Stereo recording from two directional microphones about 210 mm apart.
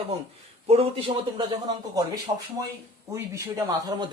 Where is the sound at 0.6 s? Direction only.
30° right (ahead or behind).